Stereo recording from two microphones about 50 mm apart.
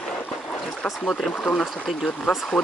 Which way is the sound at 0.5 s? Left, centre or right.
Left.